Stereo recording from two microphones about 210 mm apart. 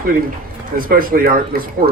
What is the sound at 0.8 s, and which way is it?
Speech, 45° right (ahead or behind).